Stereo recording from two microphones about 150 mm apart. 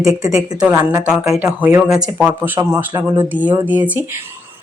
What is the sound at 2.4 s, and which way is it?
A woman's voice, 15° right (ahead or behind).